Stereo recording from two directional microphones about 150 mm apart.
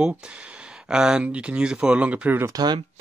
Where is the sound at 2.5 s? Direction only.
25° right (ahead or behind).